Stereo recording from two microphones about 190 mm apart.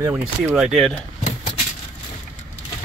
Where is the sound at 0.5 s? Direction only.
Centre (ahead or behind).